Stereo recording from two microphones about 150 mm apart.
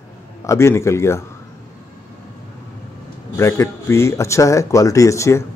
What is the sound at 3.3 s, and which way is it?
Speech, 20° left (ahead or behind).